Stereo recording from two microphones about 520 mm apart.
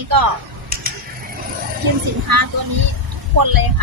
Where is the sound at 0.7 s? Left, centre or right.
Centre.